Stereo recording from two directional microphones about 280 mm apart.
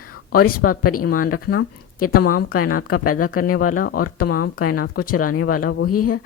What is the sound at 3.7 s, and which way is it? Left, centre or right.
Speech, left.